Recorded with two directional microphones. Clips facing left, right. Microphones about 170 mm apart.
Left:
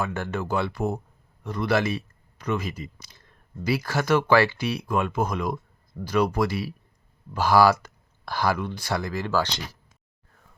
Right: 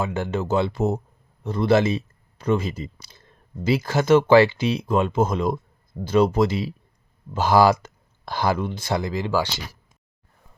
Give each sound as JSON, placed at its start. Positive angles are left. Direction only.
{"t": 0.0, "sound": "speech", "side_deg": -20}